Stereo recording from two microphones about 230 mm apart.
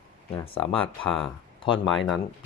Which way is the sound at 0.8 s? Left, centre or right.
Centre.